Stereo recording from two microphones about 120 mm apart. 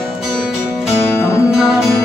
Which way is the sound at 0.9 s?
20° left (ahead or behind).